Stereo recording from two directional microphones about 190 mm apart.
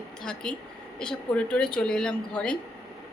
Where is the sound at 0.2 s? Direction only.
5° left (ahead or behind).